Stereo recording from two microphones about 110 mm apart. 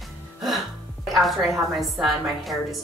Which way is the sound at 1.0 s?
Centre (ahead or behind).